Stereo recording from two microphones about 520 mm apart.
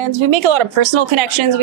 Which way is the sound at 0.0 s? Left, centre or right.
Right.